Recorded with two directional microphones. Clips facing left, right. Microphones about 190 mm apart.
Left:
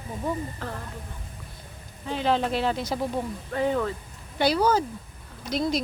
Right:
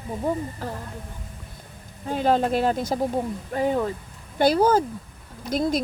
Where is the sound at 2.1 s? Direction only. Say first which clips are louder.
Right 3 dB; 45° right (ahead or behind).